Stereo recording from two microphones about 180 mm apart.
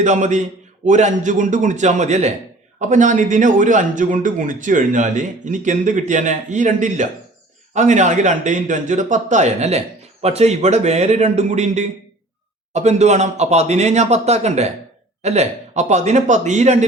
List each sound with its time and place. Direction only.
0.0 s speech: 40° right (ahead or behind)